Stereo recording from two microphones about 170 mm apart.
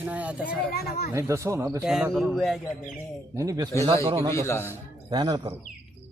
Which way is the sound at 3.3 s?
20° right (ahead or behind).